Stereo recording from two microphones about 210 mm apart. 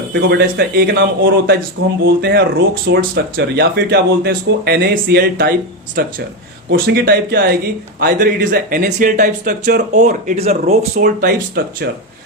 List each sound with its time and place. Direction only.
0.1 s speech: 50° right (ahead or behind)
9.9 s speech: 35° right (ahead or behind)
10.9 s speech: 45° right (ahead or behind)